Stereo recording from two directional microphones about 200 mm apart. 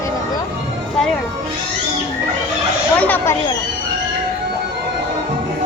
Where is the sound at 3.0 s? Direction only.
10° left (ahead or behind).